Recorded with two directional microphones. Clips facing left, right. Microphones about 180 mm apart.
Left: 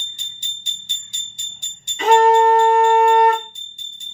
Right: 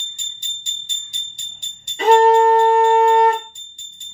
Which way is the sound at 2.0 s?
30° right (ahead or behind).